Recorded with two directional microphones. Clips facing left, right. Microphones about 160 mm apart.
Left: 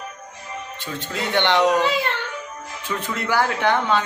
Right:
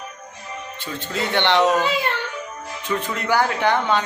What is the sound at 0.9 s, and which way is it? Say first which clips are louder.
Speech: even; 15° left (ahead or behind).